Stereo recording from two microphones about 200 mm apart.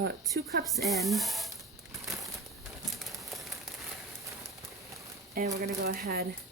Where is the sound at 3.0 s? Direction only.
Centre (ahead or behind).